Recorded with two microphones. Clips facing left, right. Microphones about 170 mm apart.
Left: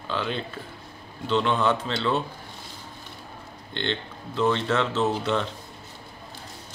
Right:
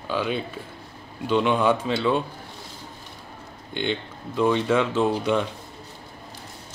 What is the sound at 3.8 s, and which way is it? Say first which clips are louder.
Speech: right 3 dB; 10° right (ahead or behind).